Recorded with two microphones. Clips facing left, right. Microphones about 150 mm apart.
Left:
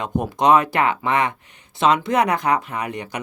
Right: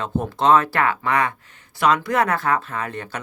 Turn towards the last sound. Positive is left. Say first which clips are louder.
# left 1 dB
turn(degrees=15)  # may be behind; listen again after turning